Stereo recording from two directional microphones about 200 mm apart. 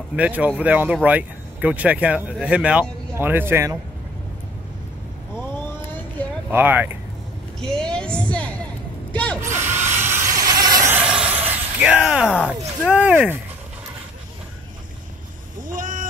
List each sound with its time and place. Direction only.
0.1 s speech: 5° right (ahead or behind)
6.2 s a sound: 5° left (ahead or behind)
6.5 s speech: 10° right (ahead or behind)
7.6 s a sound: 5° left (ahead or behind)
9.4 s drill: 10° right (ahead or behind)
9.9 s a sound: 10° right (ahead or behind)
12.3 s speech: 10° left (ahead or behind)
12.9 s speech: 5° right (ahead or behind)
15.6 s vehicle: 40° right (ahead or behind)